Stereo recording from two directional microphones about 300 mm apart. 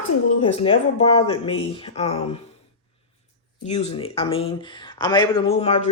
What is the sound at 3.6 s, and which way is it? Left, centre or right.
Speech, left.